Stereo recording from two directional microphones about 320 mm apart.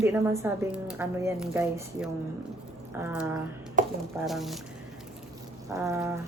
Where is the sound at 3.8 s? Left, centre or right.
Right.